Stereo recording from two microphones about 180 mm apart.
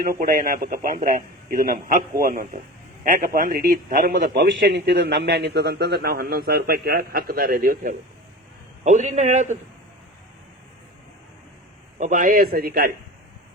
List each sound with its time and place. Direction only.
0.0 s a man's voice: 55° right (ahead or behind)
4.4 s a man's voice: 75° right (ahead or behind); by 9.6 s 40° right (ahead or behind)
11.9 s a man's voice: 45° right (ahead or behind)